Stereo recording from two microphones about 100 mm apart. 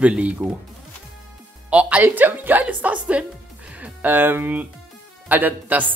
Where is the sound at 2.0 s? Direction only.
20° right (ahead or behind).